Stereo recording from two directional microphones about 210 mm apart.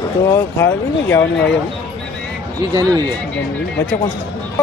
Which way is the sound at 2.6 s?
20° right (ahead or behind).